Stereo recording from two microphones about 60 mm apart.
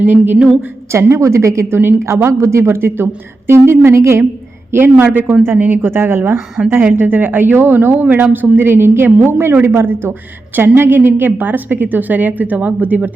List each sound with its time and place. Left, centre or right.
0.0 s speech: right
0.3 s a woman's voice: centre
1.1 s a woman's voice: right
4.7 s a woman's voice: right